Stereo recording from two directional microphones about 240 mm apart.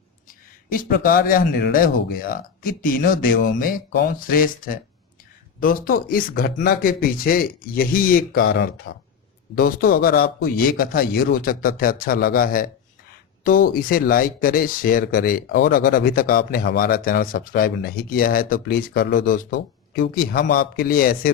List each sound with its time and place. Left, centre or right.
0.3 s speech: left
8.4 s speech: left
9.6 s speech: left